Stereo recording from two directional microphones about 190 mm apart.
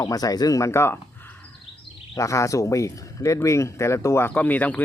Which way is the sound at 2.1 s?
15° left (ahead or behind).